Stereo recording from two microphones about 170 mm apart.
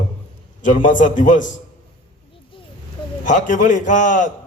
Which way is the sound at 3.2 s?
50° left (ahead or behind).